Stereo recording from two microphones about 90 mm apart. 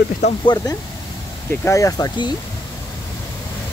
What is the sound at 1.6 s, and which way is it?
Speech, 35° left (ahead or behind).